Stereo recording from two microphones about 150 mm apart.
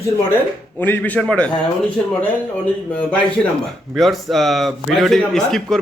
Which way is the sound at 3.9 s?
Centre (ahead or behind).